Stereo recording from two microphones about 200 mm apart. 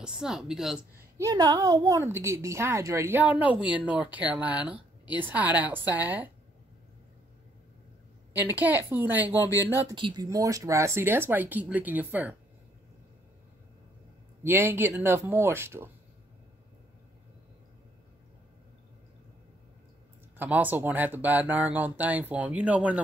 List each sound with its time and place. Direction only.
0.0 s speech: 5° right (ahead or behind)
1.1 s speech: 15° right (ahead or behind)
8.3 s speech: 10° right (ahead or behind)
9.9 s speech: 20° right (ahead or behind)
14.4 s speech: 10° right (ahead or behind)
20.3 s speech: 10° right (ahead or behind)